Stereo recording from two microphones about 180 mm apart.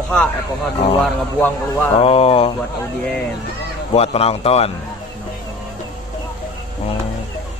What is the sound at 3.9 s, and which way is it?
Speech, 35° left (ahead or behind).